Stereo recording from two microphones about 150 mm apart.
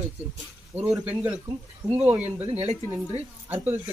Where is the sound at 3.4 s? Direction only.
10° right (ahead or behind).